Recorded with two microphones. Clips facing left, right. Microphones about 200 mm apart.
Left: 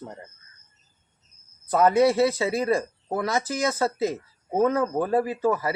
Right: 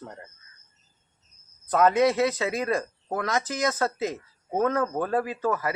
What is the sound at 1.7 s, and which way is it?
Speech, 10° left (ahead or behind).